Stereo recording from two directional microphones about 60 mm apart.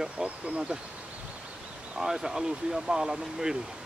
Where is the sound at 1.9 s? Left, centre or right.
Centre.